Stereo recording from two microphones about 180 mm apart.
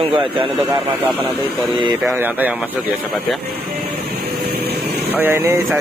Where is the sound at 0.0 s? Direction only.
30° right (ahead or behind).